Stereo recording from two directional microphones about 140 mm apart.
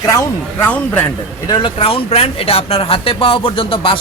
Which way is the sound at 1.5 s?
35° left (ahead or behind).